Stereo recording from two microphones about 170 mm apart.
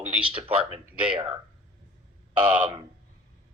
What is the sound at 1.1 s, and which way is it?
Speech, 30° right (ahead or behind).